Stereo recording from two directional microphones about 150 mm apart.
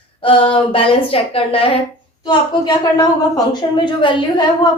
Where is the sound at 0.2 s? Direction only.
35° left (ahead or behind).